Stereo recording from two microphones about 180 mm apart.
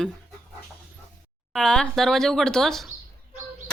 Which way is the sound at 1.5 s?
5° left (ahead or behind).